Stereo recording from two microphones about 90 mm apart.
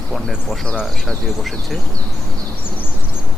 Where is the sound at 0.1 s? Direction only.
Centre (ahead or behind).